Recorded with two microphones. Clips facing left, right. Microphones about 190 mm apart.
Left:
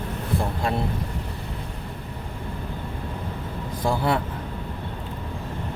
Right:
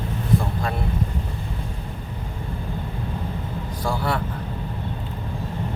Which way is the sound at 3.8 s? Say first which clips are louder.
Left 2 dB; 25° left (ahead or behind).